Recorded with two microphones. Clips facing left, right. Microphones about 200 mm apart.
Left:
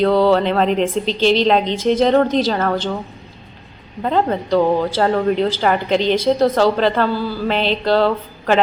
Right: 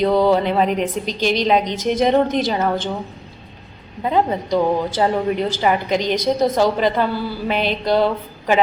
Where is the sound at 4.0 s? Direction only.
10° right (ahead or behind).